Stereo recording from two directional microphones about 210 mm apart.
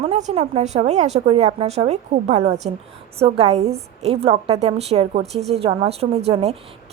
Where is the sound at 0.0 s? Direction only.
30° right (ahead or behind).